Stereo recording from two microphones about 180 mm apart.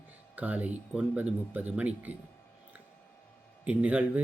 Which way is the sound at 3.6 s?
10° right (ahead or behind).